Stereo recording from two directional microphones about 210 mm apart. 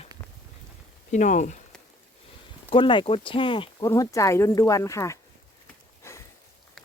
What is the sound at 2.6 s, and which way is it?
Speech, 25° left (ahead or behind).